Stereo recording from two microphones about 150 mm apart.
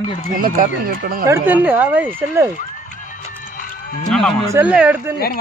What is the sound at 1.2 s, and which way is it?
Speech, 15° right (ahead or behind).